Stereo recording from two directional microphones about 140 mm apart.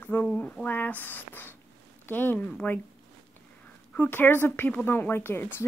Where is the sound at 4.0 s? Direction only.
15° left (ahead or behind).